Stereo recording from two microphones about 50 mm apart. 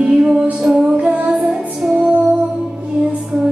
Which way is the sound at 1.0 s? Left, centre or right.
Right.